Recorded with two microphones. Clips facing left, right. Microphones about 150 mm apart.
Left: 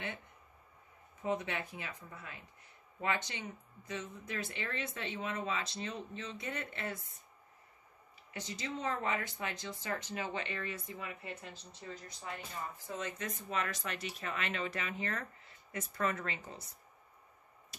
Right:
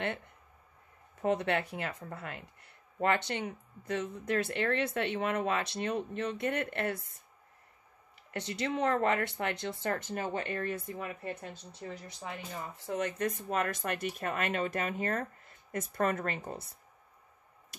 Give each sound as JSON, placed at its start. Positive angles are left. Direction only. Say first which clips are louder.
{"t": 1.2, "sound": "speech", "louder": "right 7 dB", "side_deg": -70}
{"t": 8.3, "sound": "speech", "louder": "right 7 dB", "side_deg": -65}